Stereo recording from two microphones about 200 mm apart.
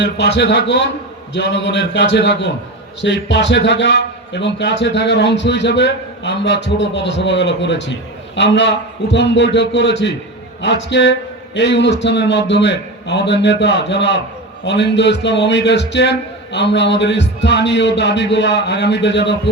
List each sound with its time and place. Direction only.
0.0 s a man's voice: 60° left (ahead or behind)